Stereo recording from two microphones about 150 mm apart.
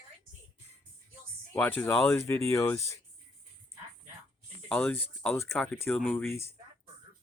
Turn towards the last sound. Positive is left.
turn(degrees=15)  # may be behind; listen again after turning